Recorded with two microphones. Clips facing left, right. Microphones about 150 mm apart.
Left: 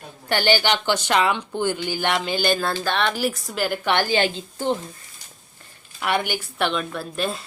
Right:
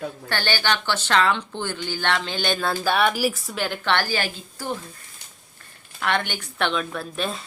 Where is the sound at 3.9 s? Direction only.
15° left (ahead or behind).